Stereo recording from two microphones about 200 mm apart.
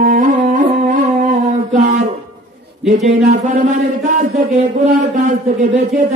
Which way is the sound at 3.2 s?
40° right (ahead or behind).